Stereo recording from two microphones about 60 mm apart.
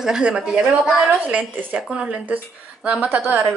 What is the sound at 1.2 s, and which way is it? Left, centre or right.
Speech, right.